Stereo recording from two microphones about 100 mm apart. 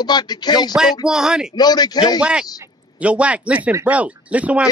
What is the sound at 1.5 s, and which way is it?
Speech, 45° left (ahead or behind).